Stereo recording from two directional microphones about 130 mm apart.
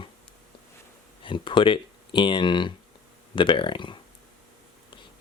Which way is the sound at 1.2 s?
40° left (ahead or behind).